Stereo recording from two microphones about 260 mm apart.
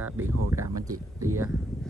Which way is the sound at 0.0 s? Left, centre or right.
Centre.